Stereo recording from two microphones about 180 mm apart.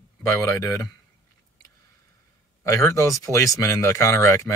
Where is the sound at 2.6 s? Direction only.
15° left (ahead or behind).